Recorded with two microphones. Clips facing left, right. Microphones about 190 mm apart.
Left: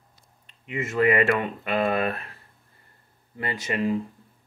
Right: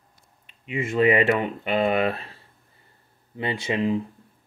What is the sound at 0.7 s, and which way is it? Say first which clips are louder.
Speech: right 2 dB; 25° right (ahead or behind).